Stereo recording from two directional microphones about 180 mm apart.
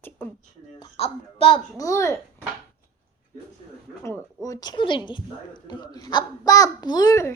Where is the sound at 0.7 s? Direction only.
30° left (ahead or behind).